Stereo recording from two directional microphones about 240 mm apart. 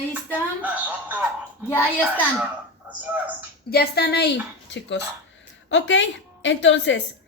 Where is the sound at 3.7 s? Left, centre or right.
Left.